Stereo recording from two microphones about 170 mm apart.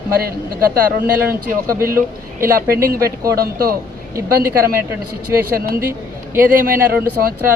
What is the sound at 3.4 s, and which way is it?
Speech, 60° right (ahead or behind).